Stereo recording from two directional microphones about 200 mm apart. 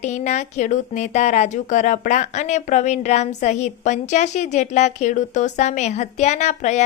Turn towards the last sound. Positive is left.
turn(degrees=35)  # may be behind; listen again after turning